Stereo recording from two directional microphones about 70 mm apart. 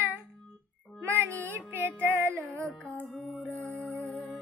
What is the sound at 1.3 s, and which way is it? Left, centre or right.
Music, left.